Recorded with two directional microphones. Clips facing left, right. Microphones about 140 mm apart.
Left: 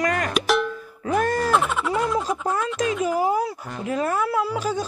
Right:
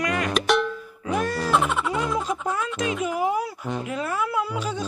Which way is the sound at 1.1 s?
45° left (ahead or behind).